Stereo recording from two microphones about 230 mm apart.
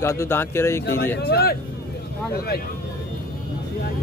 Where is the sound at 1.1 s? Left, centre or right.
Left.